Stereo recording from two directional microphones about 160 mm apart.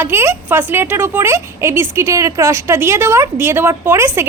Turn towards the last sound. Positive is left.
turn(degrees=-15)  # may be behind; listen again after turning